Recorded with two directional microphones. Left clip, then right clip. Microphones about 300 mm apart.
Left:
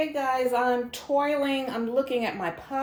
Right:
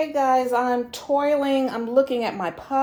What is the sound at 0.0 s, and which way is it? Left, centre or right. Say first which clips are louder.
Speech: right 5 dB; right.